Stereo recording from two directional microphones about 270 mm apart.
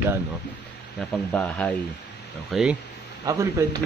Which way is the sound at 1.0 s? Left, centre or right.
Centre.